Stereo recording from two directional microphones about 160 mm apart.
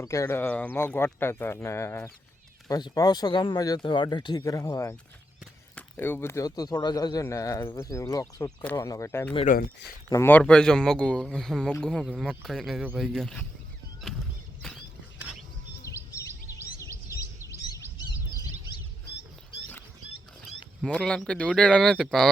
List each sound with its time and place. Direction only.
0.0 s speech: 20° left (ahead or behind)
9.5 s speech: 55° left (ahead or behind)
10.1 s speech: 15° left (ahead or behind)
14.6 s a sound: 5° left (ahead or behind)
15.8 s a sound: 20° left (ahead or behind)
20.8 s speech: 5° left (ahead or behind)